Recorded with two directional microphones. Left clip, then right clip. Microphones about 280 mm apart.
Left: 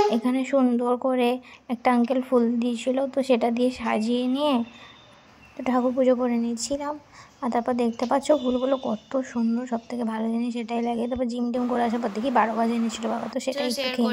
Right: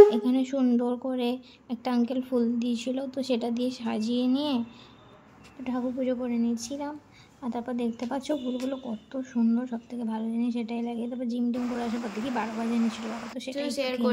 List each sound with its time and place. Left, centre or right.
0.1 s speech: centre
13.5 s speech: centre